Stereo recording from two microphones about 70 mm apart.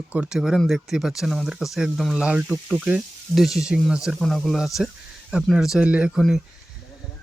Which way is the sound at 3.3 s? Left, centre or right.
Centre.